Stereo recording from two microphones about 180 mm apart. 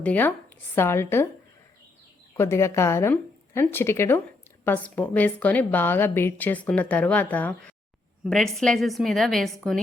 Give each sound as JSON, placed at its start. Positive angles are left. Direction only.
{"t": 0.0, "sound": "a woman's voice", "side_deg": 10}
{"t": 2.3, "sound": "a woman's voice", "side_deg": 15}